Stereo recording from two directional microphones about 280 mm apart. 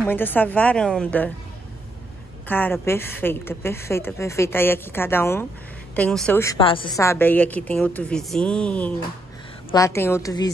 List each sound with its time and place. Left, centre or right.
0.0 s a woman's voice: centre
2.4 s a woman's voice: centre